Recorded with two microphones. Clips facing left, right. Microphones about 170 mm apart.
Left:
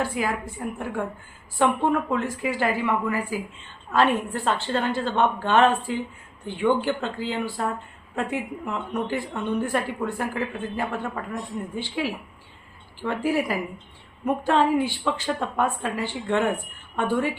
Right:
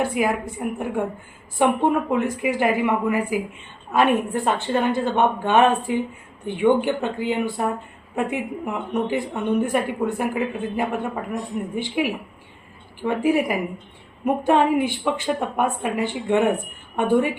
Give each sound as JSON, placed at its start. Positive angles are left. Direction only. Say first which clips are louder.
{"t": 0.0, "sound": "a woman's voice", "louder": "right 4 dB", "side_deg": -20}